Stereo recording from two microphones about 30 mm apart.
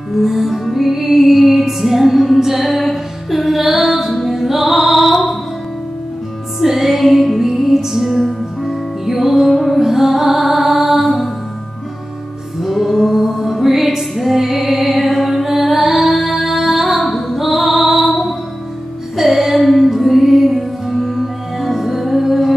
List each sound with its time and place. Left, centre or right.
0.2 s music: centre
6.6 s music: centre
12.6 s music: centre